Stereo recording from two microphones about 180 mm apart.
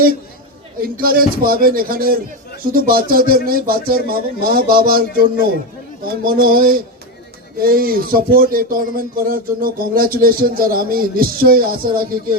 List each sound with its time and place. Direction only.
0.8 s speech: 55° right (ahead or behind)